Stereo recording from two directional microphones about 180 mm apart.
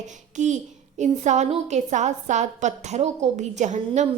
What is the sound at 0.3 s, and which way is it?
A child's voice, 40° right (ahead or behind).